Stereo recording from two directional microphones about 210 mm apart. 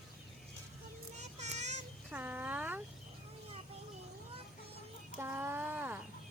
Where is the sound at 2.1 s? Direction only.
10° right (ahead or behind).